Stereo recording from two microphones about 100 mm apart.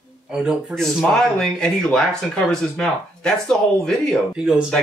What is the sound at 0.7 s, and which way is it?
Speech, 5° left (ahead or behind).